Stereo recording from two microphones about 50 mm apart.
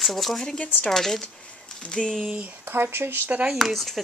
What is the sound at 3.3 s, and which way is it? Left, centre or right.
Speech, right.